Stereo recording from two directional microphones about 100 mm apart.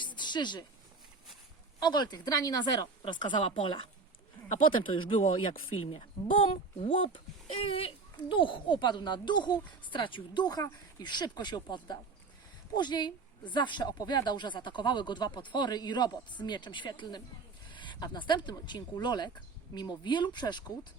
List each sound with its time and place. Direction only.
0.0 s a sound: 50° left (ahead or behind)
1.8 s a woman's voice: 45° left (ahead or behind)
3.0 s speech: 50° left (ahead or behind)
5.8 s a child's voice: 75° left (ahead or behind)
8.1 s a woman's voice: 55° left (ahead or behind)